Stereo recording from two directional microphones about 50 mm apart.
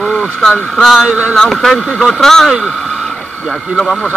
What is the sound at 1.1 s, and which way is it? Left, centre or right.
Speech, right.